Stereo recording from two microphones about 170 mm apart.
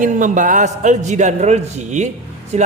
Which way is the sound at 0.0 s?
50° right (ahead or behind).